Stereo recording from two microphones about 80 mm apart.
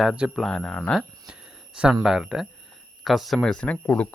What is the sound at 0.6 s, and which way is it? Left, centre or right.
Speech, centre.